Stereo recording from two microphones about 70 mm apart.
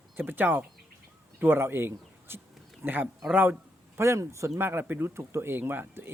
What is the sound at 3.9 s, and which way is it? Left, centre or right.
Speech, right.